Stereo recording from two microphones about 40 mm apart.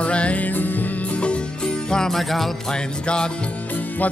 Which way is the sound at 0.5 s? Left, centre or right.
Left.